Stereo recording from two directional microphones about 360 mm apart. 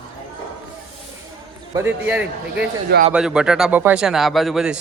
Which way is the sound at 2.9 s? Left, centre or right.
Right.